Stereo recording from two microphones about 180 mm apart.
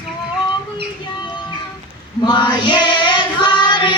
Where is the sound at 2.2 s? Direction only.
25° left (ahead or behind).